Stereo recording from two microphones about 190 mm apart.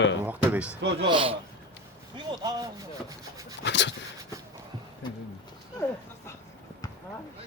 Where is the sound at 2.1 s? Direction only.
20° right (ahead or behind).